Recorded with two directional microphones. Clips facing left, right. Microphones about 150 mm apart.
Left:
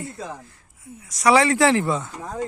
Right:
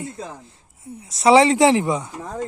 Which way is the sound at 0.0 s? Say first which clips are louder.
Right 1 dB; 20° right (ahead or behind).